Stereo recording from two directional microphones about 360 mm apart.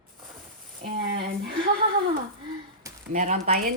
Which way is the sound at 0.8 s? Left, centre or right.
Right.